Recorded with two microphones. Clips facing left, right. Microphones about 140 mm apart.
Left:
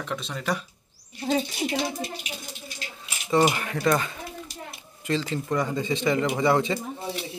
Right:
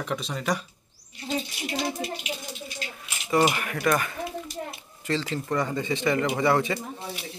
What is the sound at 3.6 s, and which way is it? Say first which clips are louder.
Speech: left 1 dB; 20° left (ahead or behind).